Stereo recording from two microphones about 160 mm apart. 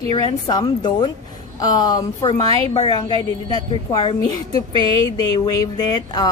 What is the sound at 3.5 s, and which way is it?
Speech, 25° left (ahead or behind).